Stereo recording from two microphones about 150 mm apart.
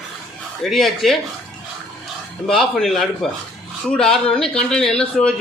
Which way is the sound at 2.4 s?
Centre (ahead or behind).